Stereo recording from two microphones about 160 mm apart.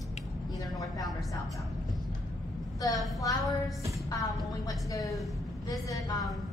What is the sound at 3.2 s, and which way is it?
Speech, 20° left (ahead or behind).